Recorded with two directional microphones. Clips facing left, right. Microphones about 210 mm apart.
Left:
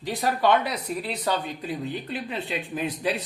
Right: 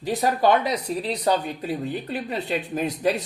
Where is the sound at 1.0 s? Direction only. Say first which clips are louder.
Right 4 dB; 40° right (ahead or behind).